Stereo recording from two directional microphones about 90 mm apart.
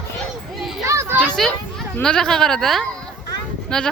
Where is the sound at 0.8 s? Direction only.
35° right (ahead or behind).